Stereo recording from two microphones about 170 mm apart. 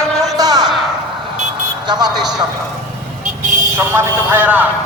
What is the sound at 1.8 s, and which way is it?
Speech, 25° right (ahead or behind).